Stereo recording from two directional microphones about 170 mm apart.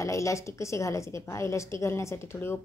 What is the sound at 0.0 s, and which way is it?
A woman's voice, 20° left (ahead or behind).